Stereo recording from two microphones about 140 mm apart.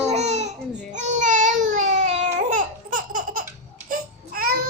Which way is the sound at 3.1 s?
70° right (ahead or behind).